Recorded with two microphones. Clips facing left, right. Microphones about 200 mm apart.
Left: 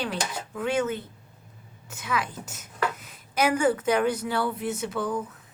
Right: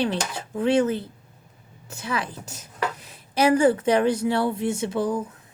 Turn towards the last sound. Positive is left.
turn(degrees=-25)  # may be behind; listen again after turning